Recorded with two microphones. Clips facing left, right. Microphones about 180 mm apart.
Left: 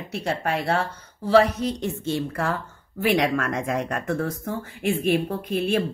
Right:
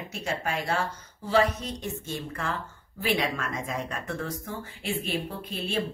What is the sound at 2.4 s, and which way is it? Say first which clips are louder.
Speech: left 6 dB; 40° left (ahead or behind).